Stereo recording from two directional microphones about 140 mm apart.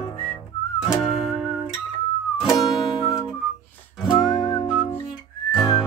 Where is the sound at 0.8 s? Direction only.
Centre (ahead or behind).